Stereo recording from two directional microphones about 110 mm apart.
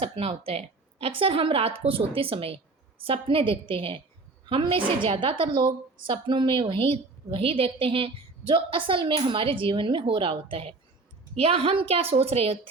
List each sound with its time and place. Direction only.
0.0 s a woman's voice: 60° right (ahead or behind)